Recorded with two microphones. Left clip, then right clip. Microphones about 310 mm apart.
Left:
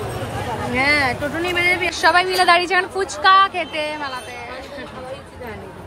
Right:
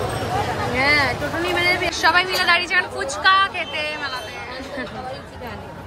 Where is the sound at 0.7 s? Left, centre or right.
Left.